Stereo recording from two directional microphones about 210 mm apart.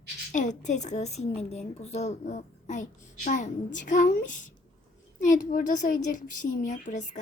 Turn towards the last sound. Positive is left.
turn(degrees=35)  # may be behind; listen again after turning